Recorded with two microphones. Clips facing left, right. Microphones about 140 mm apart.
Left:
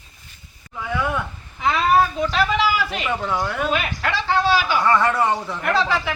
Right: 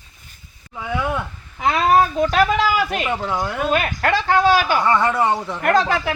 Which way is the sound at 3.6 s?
50° right (ahead or behind).